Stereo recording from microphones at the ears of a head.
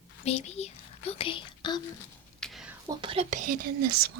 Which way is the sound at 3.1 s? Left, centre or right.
Right.